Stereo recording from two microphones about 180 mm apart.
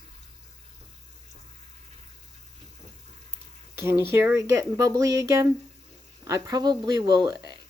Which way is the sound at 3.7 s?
15° right (ahead or behind).